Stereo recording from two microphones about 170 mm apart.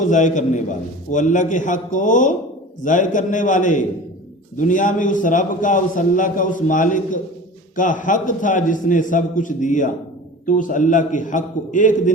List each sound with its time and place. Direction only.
0.0 s a man's voice: 45° left (ahead or behind)